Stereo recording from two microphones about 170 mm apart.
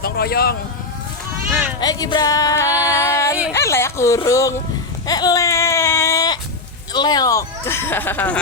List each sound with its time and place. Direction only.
0.0 s speech: 65° left (ahead or behind)
1.8 s a sound: 25° left (ahead or behind)
5.0 s baby cry: 20° left (ahead or behind)
6.9 s speech: 25° left (ahead or behind)